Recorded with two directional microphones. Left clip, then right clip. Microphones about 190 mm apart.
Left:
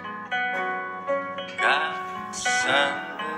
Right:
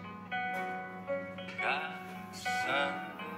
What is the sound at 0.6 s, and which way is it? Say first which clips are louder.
Music: left 10 dB; 45° left (ahead or behind).